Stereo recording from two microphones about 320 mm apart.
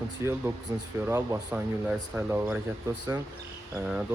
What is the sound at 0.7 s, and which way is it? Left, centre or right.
Speech, centre.